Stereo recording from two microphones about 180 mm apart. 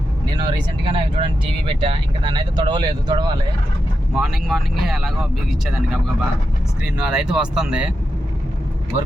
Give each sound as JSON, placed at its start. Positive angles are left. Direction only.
{"t": 0.3, "sound": "speech", "side_deg": -25}
{"t": 4.1, "sound": "speech", "side_deg": 0}